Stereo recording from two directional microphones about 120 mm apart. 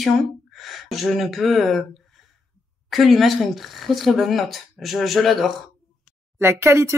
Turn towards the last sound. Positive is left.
turn(degrees=-20)  # may be behind; listen again after turning